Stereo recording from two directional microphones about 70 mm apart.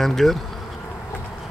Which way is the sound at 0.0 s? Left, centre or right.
Centre.